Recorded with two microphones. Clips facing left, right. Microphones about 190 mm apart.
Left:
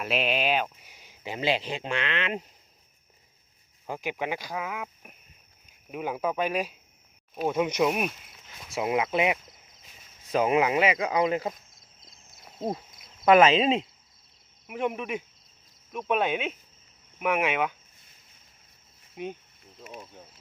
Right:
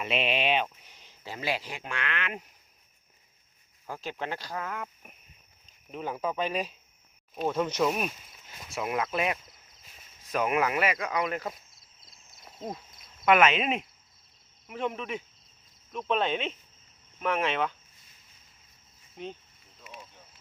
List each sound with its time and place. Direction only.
0.0 s speech: centre (ahead or behind); by 2.4 s 25° left (ahead or behind)
3.8 s speech: 15° left (ahead or behind)
12.5 s speech: 35° left (ahead or behind)
13.2 s cricket: 30° left (ahead or behind)
14.7 s speech: 15° left (ahead or behind)
19.1 s speech: 10° left (ahead or behind)
19.8 s snake: 45° left (ahead or behind)